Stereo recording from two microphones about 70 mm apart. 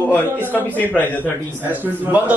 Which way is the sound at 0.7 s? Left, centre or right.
Left.